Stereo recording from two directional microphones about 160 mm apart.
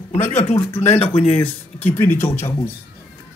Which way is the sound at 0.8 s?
40° left (ahead or behind).